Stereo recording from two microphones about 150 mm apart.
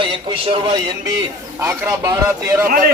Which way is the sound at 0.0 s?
35° right (ahead or behind).